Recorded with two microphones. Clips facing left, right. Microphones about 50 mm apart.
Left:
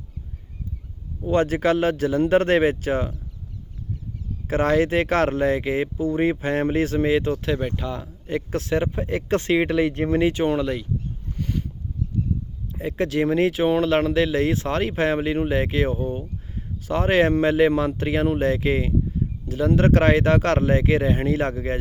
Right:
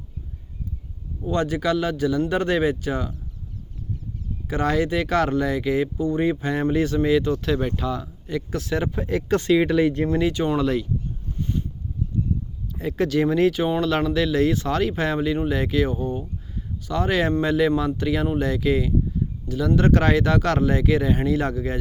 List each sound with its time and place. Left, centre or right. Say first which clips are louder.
1.2 s speech: left 3 dB; left
4.4 s speech: left 3 dB; left
7.6 s speech: right 2 dB; centre
8.4 s speech: left 3 dB; left
10.6 s speech: right 3 dB; centre
12.8 s speech: right 1 dB; left
16.2 s a sound: even; left
17.4 s speech: left 2 dB; left